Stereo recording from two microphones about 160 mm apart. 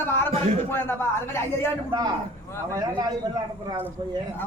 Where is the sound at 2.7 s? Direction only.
25° right (ahead or behind).